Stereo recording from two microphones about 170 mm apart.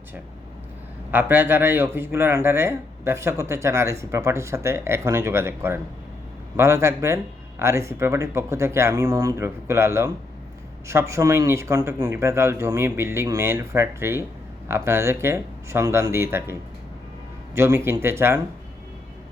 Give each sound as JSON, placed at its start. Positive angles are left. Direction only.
{"t": 1.1, "sound": "speech", "side_deg": -10}